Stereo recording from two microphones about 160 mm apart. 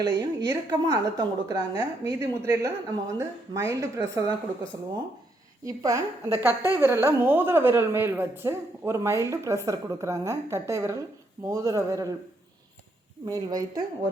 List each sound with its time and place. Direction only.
0.3 s a woman's voice: 25° right (ahead or behind)
5.6 s a woman's voice: 20° right (ahead or behind)
6.5 s a woman's voice: 20° left (ahead or behind)
6.7 s a woman's voice: 15° right (ahead or behind)
13.2 s a woman's voice: 25° right (ahead or behind)